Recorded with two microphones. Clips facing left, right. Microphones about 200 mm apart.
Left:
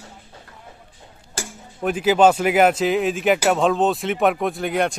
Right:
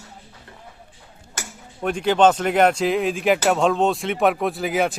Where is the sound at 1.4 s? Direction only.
30° left (ahead or behind).